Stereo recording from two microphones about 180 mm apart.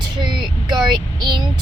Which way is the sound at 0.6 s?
25° right (ahead or behind).